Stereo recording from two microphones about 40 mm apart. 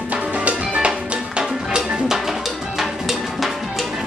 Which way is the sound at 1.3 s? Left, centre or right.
Centre.